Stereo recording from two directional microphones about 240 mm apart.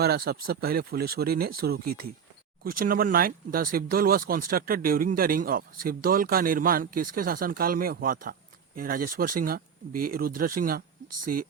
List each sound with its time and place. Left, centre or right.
0.0 s speech: right